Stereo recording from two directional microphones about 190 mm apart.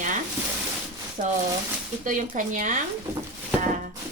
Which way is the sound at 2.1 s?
40° right (ahead or behind).